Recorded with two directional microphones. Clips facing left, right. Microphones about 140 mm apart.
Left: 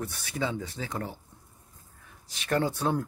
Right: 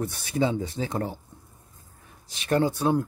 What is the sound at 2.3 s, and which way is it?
Speech, 20° right (ahead or behind).